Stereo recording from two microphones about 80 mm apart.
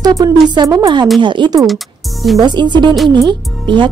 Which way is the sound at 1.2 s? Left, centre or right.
Right.